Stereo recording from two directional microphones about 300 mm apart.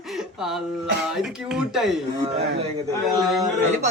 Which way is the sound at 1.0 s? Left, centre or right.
Centre.